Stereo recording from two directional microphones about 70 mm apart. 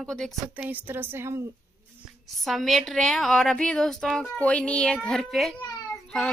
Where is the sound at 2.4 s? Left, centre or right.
Centre.